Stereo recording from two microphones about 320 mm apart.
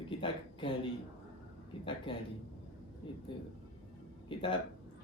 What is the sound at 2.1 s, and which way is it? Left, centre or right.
Speech, centre.